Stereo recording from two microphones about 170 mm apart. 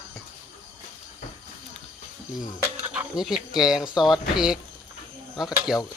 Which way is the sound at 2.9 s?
5° right (ahead or behind).